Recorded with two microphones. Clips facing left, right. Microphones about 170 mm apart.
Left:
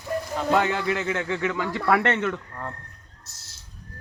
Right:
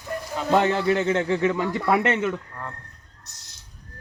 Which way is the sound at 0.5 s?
25° right (ahead or behind).